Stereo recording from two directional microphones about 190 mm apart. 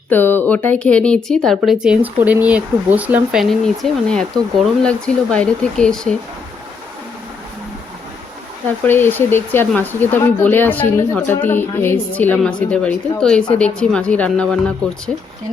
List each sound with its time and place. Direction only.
0.1 s speech: 10° left (ahead or behind); by 3.4 s 10° right (ahead or behind)
3.8 s speech: centre (ahead or behind)
8.8 s speech: 10° left (ahead or behind)